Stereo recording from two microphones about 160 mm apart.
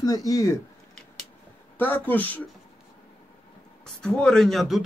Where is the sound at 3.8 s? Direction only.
5° left (ahead or behind).